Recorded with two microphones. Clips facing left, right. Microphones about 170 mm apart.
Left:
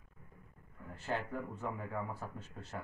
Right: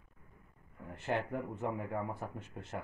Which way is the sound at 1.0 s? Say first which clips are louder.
Right 3 dB; 20° right (ahead or behind).